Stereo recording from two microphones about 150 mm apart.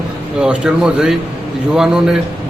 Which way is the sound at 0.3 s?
5° right (ahead or behind).